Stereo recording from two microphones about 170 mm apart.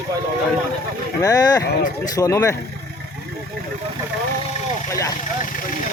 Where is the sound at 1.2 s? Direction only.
20° left (ahead or behind).